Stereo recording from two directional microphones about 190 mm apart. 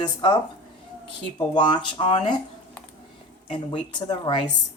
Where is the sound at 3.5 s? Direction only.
25° left (ahead or behind).